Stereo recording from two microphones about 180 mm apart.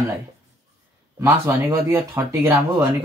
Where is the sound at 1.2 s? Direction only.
15° right (ahead or behind).